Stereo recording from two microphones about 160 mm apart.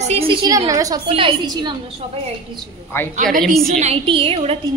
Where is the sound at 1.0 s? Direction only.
35° right (ahead or behind).